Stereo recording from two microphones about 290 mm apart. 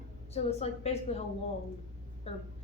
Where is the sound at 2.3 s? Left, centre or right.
Left.